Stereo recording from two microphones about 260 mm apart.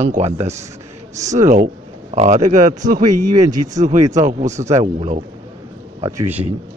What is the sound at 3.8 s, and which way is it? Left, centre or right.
Speech, right.